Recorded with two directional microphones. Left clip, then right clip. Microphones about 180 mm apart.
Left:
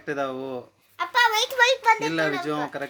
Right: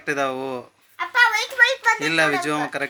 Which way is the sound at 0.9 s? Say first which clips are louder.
Right 3 dB; 55° left (ahead or behind).